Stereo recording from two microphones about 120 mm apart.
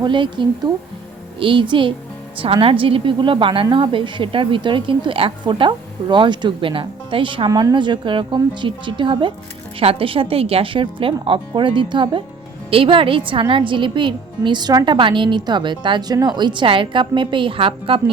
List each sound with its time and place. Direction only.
0.0 s a woman's voice: 40° right (ahead or behind)